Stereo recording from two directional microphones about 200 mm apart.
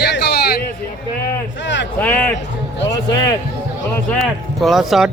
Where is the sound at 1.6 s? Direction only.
65° left (ahead or behind).